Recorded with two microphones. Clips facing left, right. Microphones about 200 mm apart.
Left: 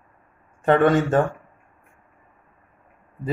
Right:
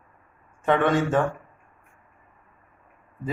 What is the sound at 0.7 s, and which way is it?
Speech, 40° left (ahead or behind).